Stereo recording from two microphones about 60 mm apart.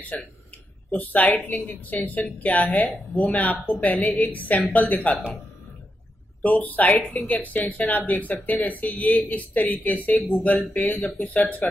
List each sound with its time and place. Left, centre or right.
0.1 s a woman's voice: left
6.4 s a woman's voice: left